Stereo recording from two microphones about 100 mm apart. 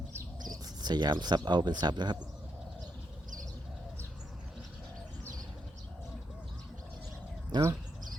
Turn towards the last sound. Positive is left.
turn(degrees=-45)  # may be behind; listen again after turning